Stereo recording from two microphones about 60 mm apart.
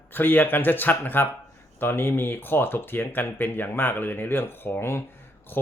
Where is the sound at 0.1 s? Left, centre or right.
Left.